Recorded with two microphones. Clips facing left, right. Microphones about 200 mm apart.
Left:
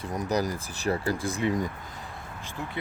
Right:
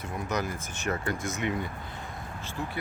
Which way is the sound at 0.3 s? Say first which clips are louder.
Left 4 dB; 35° left (ahead or behind).